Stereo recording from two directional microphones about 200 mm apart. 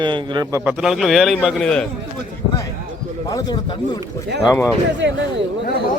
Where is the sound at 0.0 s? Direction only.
25° right (ahead or behind).